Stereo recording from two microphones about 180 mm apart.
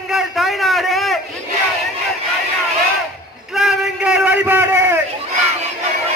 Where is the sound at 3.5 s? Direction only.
5° right (ahead or behind).